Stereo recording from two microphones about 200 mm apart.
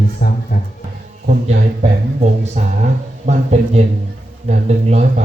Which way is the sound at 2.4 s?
35° right (ahead or behind).